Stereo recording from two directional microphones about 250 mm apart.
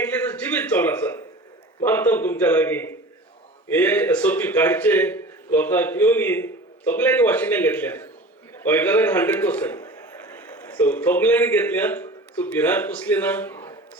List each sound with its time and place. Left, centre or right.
0.0 s a man's voice: centre